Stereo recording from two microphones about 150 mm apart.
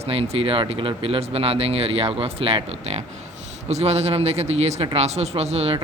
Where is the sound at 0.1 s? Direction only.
40° right (ahead or behind).